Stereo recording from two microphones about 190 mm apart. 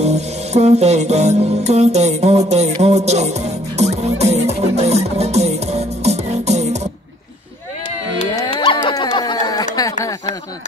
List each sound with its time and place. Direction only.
0.0 s music: 35° right (ahead or behind)
8.5 s dog: 25° left (ahead or behind)